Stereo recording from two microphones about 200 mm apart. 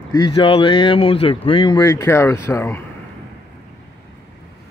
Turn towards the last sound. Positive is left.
turn(degrees=10)  # may be behind; listen again after turning